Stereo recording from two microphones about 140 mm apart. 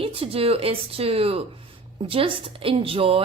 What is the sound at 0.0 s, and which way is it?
A woman's voice, 40° right (ahead or behind).